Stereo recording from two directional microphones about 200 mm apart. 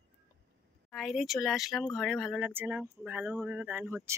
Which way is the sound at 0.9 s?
Centre (ahead or behind).